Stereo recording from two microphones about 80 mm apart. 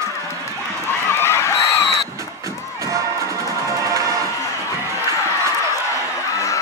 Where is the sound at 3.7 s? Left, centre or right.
Right.